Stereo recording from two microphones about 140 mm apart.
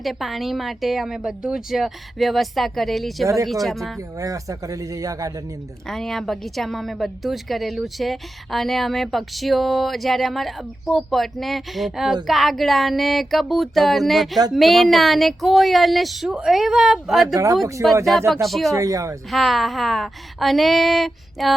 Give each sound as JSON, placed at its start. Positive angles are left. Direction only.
{"t": 0.0, "sound": "a woman's voice", "side_deg": 0}
{"t": 4.2, "sound": "speech", "side_deg": -25}
{"t": 5.9, "sound": "a woman's voice", "side_deg": 0}
{"t": 17.3, "sound": "speech", "side_deg": -25}
{"t": 18.4, "sound": "a woman's voice", "side_deg": 0}
{"t": 18.7, "sound": "speech", "side_deg": -25}
{"t": 19.3, "sound": "a woman's voice", "side_deg": 0}